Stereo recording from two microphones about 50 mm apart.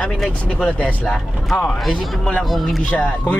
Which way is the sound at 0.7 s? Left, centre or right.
Left.